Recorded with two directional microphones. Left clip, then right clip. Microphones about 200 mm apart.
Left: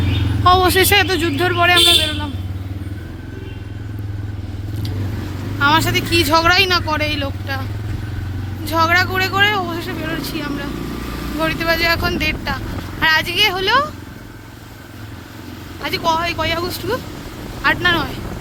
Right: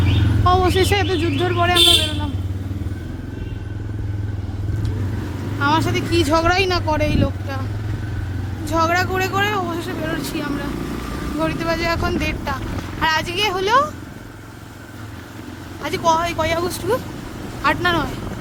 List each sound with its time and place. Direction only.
0.4 s speech: centre (ahead or behind)
5.5 s speech: centre (ahead or behind)
8.6 s speech: 5° right (ahead or behind)
11.3 s speech: 5° right (ahead or behind)
15.8 s speech: 15° right (ahead or behind)